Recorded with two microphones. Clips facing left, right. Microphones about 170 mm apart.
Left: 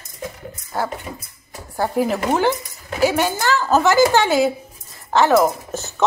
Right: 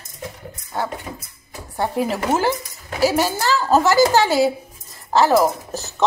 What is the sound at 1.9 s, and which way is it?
A woman's voice, centre (ahead or behind).